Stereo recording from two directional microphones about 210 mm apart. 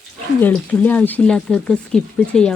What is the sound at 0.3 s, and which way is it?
Speech, 5° left (ahead or behind).